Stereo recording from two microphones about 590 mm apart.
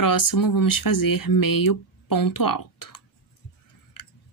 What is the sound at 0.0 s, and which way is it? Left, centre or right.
A woman's voice, left.